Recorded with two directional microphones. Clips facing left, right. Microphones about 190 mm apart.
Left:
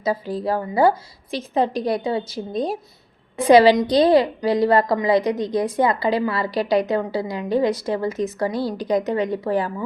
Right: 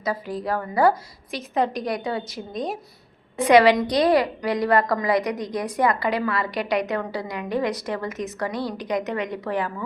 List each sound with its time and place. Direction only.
0.0 s a woman's voice: 30° left (ahead or behind)